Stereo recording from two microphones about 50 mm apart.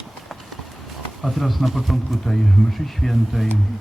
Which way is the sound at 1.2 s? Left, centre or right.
Centre.